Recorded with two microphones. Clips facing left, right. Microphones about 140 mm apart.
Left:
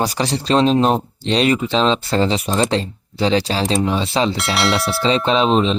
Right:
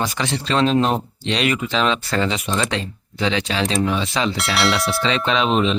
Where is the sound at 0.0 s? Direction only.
35° left (ahead or behind).